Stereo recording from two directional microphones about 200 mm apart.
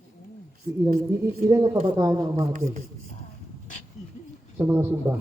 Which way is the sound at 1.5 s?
15° right (ahead or behind).